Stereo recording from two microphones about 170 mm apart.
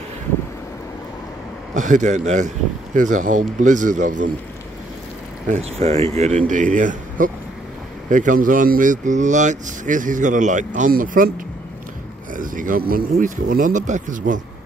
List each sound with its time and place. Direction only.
1.7 s speech: 45° right (ahead or behind)
5.5 s speech: 40° right (ahead or behind); by 11.3 s 55° right (ahead or behind)
12.4 s speech: 50° right (ahead or behind)